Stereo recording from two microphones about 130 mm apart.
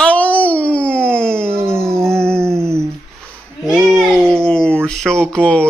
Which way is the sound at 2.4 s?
20° right (ahead or behind).